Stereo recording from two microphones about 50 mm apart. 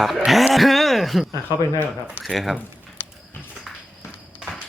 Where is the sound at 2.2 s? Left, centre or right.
Centre.